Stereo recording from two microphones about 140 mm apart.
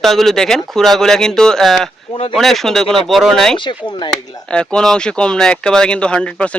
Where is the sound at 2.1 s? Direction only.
40° left (ahead or behind).